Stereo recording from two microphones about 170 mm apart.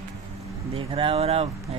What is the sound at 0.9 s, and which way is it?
Speech, 30° right (ahead or behind).